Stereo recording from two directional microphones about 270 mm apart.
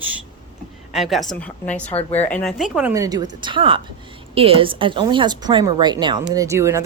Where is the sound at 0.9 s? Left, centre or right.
Centre.